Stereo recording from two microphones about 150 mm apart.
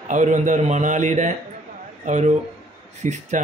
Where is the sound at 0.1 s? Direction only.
55° right (ahead or behind).